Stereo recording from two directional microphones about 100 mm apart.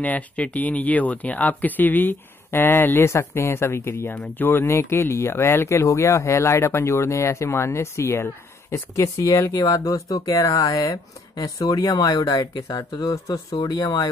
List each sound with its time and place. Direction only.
0.0 s speech: 15° left (ahead or behind); by 14.1 s 35° left (ahead or behind)